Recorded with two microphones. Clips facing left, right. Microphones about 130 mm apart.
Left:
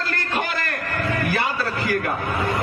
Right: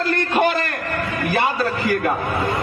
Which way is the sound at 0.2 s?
25° right (ahead or behind).